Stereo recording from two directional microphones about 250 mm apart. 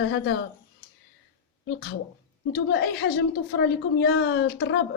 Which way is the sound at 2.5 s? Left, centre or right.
Left.